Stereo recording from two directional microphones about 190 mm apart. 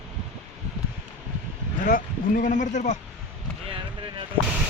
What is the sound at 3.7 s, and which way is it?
Basketball bounce, 25° right (ahead or behind).